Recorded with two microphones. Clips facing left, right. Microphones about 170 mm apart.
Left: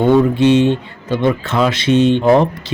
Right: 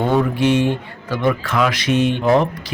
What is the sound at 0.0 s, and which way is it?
A man's voice, 25° left (ahead or behind).